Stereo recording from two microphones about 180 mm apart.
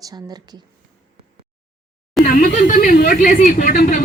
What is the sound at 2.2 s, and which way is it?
Speech, 50° left (ahead or behind).